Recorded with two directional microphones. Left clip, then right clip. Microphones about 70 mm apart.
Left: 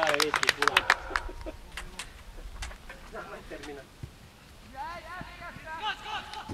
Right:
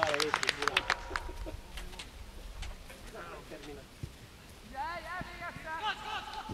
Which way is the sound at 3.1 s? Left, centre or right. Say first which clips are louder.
Left 5 dB; left.